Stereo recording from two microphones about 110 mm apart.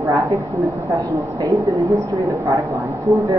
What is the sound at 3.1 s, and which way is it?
Speech, 30° right (ahead or behind).